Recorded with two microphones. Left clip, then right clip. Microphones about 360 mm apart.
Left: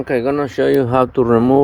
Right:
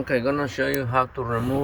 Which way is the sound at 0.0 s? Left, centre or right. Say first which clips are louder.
Left 6 dB; centre.